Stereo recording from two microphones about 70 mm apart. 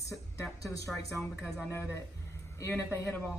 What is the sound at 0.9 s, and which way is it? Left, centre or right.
Speech, centre.